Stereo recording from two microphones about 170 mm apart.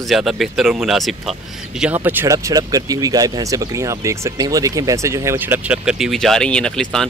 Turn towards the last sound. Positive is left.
turn(degrees=5)  # may be behind; listen again after turning